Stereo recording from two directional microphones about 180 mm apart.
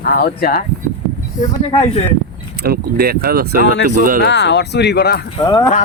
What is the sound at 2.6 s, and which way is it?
Speech, 60° right (ahead or behind).